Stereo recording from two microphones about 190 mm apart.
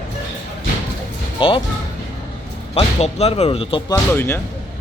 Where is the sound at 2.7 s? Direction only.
30° left (ahead or behind).